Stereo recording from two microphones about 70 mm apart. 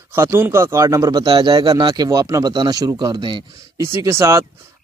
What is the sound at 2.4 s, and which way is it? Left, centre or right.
Speech, right.